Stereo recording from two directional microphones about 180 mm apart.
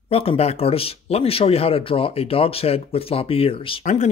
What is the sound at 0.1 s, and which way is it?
Speech, 30° left (ahead or behind).